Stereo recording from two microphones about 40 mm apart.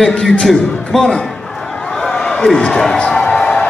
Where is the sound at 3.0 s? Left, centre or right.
Left.